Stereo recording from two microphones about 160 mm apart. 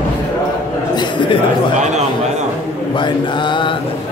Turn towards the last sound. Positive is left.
turn(degrees=30)  # may be behind; listen again after turning